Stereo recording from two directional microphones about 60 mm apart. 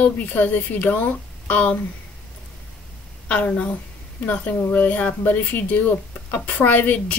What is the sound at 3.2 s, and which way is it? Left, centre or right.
A woman's voice, left.